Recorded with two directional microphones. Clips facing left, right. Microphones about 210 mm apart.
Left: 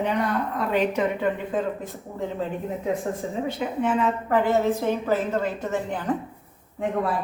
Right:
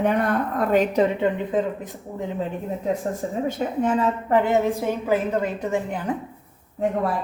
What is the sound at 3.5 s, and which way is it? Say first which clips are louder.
Speech: right 2 dB; 45° right (ahead or behind).